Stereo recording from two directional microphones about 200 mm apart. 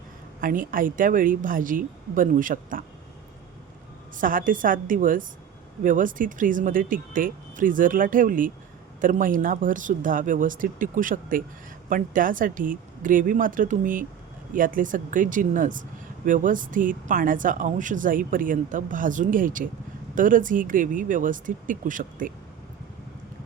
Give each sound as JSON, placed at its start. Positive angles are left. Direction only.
{"t": 0.4, "sound": "speech", "side_deg": -45}
{"t": 4.2, "sound": "speech", "side_deg": -45}